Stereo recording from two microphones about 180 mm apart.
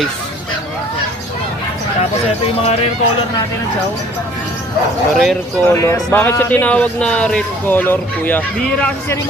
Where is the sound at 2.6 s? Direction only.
35° left (ahead or behind).